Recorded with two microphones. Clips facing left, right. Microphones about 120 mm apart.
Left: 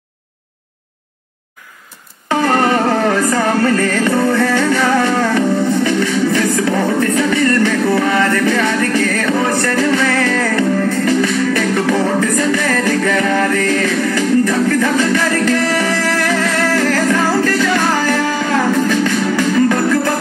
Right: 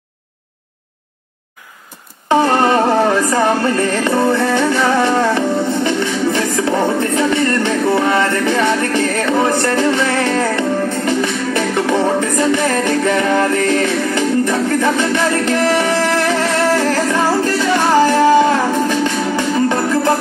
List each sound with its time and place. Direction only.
2.2 s music: 25° right (ahead or behind)